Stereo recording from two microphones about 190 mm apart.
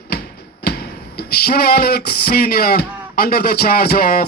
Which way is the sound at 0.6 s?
55° left (ahead or behind).